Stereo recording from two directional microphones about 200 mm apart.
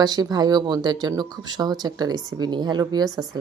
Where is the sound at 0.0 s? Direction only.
20° right (ahead or behind).